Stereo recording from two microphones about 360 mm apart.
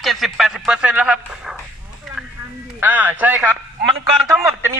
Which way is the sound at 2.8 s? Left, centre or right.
Centre.